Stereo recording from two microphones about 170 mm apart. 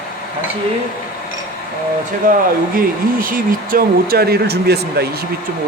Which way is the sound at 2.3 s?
50° right (ahead or behind).